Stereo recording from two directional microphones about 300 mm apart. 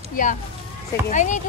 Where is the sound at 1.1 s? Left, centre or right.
Left.